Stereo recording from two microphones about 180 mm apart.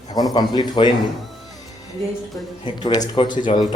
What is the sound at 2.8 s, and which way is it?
Speech, 25° left (ahead or behind).